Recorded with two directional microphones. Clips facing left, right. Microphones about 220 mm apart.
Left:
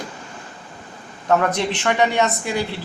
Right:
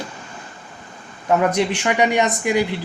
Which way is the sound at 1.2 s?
10° right (ahead or behind).